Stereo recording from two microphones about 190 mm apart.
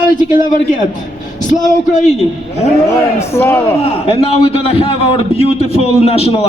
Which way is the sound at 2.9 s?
15° left (ahead or behind).